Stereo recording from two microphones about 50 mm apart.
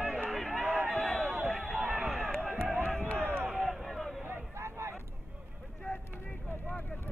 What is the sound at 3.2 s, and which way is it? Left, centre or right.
Run, right.